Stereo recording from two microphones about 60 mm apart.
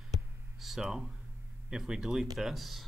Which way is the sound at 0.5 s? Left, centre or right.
Centre.